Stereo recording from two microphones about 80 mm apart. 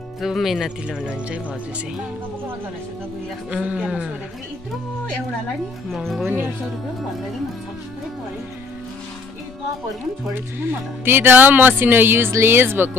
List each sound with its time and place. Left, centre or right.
0.2 s speech: centre
3.4 s speech: centre
5.9 s speech: centre
10.6 s speech: right